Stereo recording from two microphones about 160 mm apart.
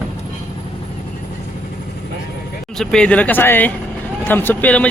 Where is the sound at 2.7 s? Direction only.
5° left (ahead or behind).